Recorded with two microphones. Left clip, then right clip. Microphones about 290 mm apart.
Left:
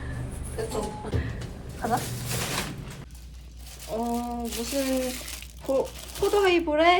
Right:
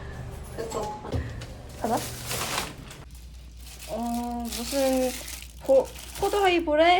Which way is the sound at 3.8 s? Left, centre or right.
Centre.